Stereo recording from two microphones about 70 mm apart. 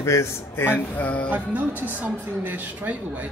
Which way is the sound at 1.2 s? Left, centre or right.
Right.